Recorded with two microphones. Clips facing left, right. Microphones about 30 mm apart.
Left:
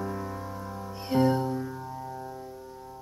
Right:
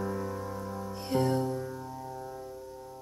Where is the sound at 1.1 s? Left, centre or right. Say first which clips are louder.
Left 4 dB; centre.